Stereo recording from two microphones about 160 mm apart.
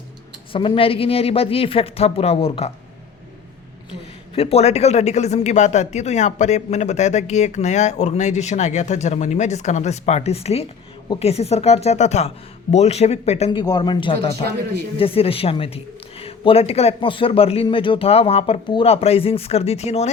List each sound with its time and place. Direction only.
0.5 s a man's voice: 35° left (ahead or behind)
4.4 s a man's voice: 40° left (ahead or behind)
13.5 s a man's voice: 30° left (ahead or behind)